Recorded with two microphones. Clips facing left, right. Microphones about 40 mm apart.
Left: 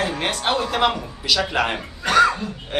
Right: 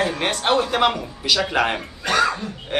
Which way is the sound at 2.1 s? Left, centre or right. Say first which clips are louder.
Left 4 dB; left.